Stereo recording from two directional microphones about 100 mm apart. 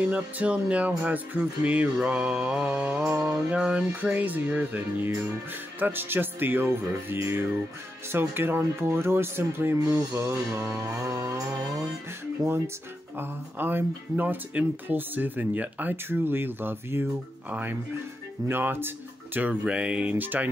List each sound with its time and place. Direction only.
0.0 s speech: 15° right (ahead or behind)
3.1 s speech: 25° right (ahead or behind)
3.3 s speech: 10° right (ahead or behind)
9.8 s speech: 35° right (ahead or behind)
10.8 s music: 30° right (ahead or behind)
13.2 s speech: 20° right (ahead or behind)